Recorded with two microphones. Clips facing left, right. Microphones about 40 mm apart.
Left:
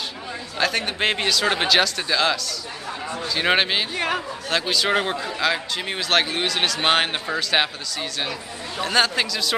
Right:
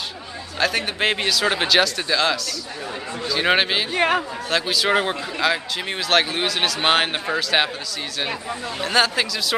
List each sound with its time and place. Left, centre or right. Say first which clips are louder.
0.6 s speech: right 1 dB; centre
3.9 s speech: right 5 dB; right
4.5 s speech: right 1 dB; centre
8.8 s speech: right 1 dB; centre